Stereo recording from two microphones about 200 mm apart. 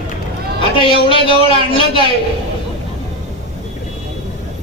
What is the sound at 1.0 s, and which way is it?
Speech, 25° left (ahead or behind).